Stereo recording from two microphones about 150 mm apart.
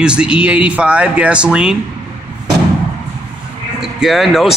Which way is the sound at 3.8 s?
Centre (ahead or behind).